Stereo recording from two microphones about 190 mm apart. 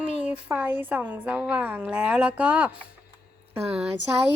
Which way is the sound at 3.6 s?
35° right (ahead or behind).